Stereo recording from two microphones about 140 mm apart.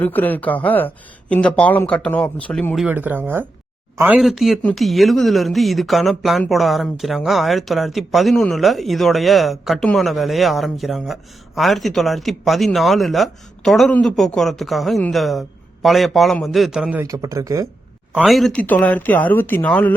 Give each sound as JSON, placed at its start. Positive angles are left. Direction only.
{"t": 0.0, "sound": "speech", "side_deg": 15}
{"t": 2.8, "sound": "speech", "side_deg": -10}
{"t": 4.2, "sound": "speech", "side_deg": 0}
{"t": 17.0, "sound": "speech", "side_deg": -25}
{"t": 18.1, "sound": "speech", "side_deg": -5}
{"t": 18.6, "sound": "speech", "side_deg": 10}